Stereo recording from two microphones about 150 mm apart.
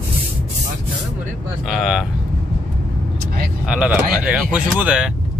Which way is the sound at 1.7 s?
Centre (ahead or behind).